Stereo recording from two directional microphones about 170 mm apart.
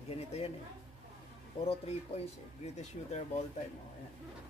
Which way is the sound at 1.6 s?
35° left (ahead or behind).